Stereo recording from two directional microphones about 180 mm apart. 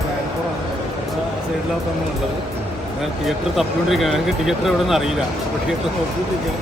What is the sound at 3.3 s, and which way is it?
Speech, centre (ahead or behind).